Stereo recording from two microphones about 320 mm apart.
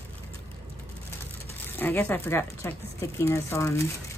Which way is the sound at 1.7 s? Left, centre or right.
Centre.